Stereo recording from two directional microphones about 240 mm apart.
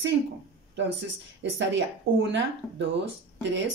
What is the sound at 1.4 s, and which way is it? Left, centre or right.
A woman's voice, right.